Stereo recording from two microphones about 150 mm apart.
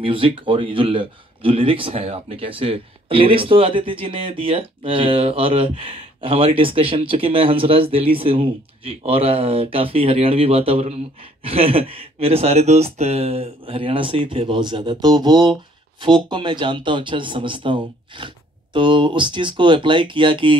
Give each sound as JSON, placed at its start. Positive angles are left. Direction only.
{"t": 0.0, "sound": "speech", "side_deg": -35}